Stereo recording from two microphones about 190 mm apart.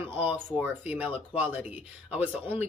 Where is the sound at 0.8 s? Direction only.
10° right (ahead or behind).